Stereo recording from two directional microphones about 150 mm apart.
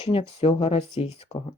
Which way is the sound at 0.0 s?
40° left (ahead or behind).